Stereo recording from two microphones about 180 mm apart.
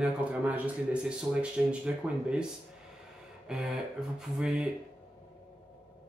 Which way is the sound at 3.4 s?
5° right (ahead or behind).